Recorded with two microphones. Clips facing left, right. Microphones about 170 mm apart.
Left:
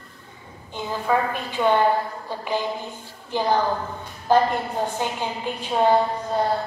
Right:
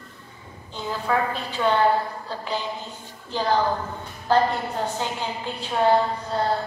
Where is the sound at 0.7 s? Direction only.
15° left (ahead or behind).